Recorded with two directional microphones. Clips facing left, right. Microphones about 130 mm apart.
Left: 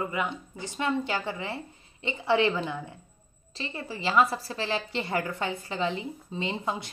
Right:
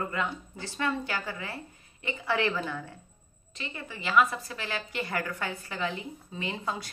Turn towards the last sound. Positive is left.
turn(degrees=20)  # may be behind; listen again after turning